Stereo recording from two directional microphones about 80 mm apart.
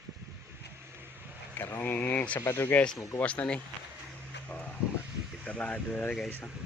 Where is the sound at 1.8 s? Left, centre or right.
Left.